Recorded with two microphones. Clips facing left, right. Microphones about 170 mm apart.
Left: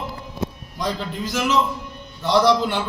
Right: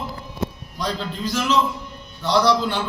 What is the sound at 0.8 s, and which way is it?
A man's voice, 20° left (ahead or behind).